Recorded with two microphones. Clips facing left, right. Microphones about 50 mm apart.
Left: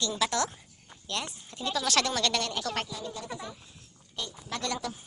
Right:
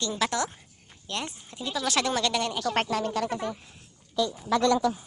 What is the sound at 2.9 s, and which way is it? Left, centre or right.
Speech, right.